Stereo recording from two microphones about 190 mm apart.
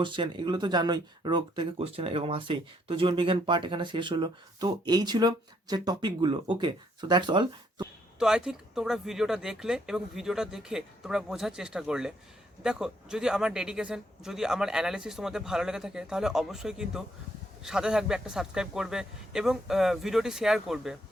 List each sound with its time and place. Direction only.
0.0 s speech: 25° right (ahead or behind)
8.2 s a man's voice: 5° right (ahead or behind)